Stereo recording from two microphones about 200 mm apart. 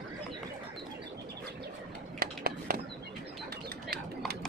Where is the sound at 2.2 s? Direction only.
45° right (ahead or behind).